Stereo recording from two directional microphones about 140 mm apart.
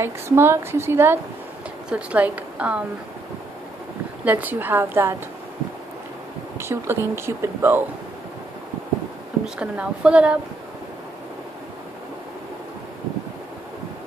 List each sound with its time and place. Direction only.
0.0 s a woman's voice: 15° right (ahead or behind)
4.2 s a woman's voice: 10° right (ahead or behind)
6.6 s a woman's voice: 20° right (ahead or behind)
9.6 s a woman's voice: 10° right (ahead or behind)